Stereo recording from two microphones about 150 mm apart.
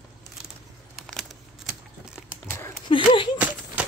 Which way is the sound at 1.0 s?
Centre (ahead or behind).